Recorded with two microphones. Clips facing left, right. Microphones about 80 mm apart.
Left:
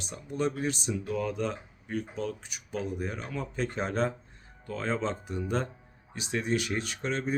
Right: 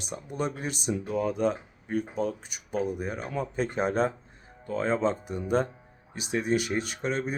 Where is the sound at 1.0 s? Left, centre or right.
Right.